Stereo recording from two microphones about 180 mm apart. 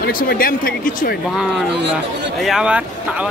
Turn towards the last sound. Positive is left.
turn(degrees=-5)  # may be behind; listen again after turning